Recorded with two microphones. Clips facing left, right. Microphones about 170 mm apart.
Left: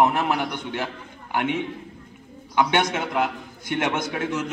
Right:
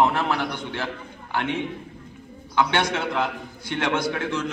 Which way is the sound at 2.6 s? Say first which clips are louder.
Left 1 dB; 20° left (ahead or behind).